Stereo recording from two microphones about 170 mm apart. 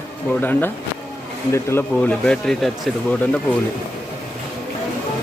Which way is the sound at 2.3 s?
5° left (ahead or behind).